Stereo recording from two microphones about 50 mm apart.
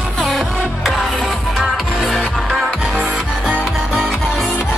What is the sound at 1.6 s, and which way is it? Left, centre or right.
Music, centre.